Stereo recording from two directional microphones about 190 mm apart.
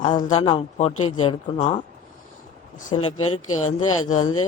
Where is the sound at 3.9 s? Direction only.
90° left.